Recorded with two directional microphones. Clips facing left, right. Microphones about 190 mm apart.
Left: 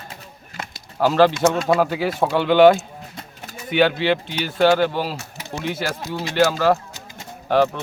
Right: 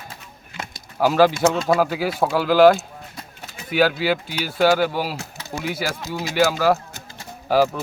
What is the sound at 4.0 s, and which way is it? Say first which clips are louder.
Speech: left 2 dB; 5° right (ahead or behind).